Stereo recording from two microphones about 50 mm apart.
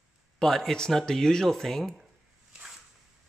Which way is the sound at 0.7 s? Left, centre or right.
Centre.